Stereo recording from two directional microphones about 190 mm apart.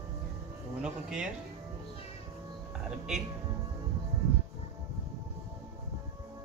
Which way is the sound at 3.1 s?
Centre (ahead or behind).